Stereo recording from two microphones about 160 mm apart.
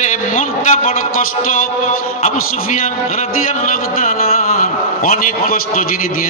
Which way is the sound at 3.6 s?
55° left (ahead or behind).